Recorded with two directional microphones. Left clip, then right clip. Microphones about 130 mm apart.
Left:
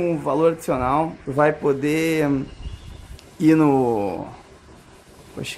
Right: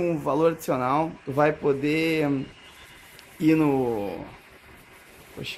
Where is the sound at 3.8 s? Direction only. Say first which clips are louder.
Left 6 dB; 25° left (ahead or behind).